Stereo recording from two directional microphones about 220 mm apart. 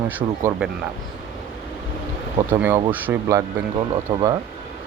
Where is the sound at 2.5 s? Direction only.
10° right (ahead or behind).